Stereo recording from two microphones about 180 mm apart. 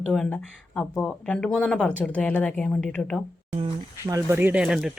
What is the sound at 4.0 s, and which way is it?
Speech, 15° right (ahead or behind).